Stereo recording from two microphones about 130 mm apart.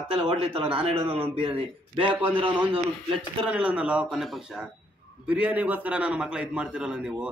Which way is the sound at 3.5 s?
10° right (ahead or behind).